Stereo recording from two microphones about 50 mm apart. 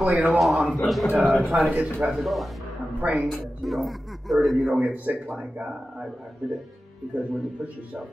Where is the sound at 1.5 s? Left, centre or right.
Right.